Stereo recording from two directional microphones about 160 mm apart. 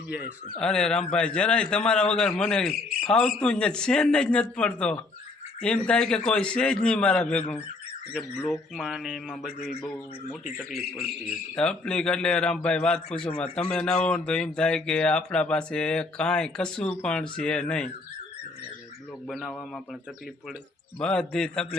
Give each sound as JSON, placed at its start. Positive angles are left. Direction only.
{"t": 0.6, "sound": "speech", "side_deg": 5}
{"t": 19.3, "sound": "speech", "side_deg": 0}
{"t": 21.0, "sound": "speech", "side_deg": 5}